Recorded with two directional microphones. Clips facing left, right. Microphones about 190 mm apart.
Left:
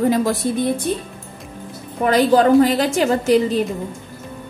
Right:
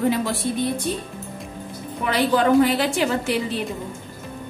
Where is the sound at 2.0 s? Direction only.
40° left (ahead or behind).